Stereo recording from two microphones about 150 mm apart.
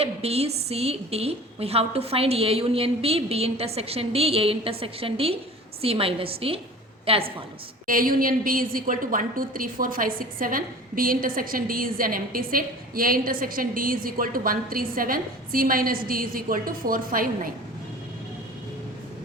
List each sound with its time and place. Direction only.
0.0 s a woman's voice: 45° right (ahead or behind)
7.9 s a woman's voice: 70° right (ahead or behind)